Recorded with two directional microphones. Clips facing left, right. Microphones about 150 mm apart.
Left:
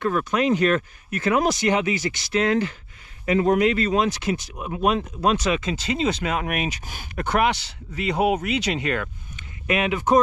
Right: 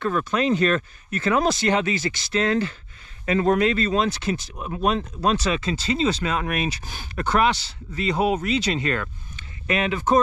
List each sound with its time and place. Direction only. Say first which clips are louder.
0.1 s speech: left 1 dB; 15° left (ahead or behind)